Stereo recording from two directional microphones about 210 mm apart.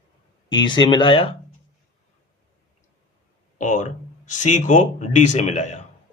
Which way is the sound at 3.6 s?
35° left (ahead or behind).